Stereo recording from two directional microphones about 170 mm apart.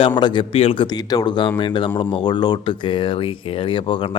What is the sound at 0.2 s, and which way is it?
A man's voice, 25° left (ahead or behind).